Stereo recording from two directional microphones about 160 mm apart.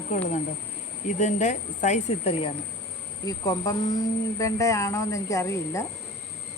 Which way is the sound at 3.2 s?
20° left (ahead or behind).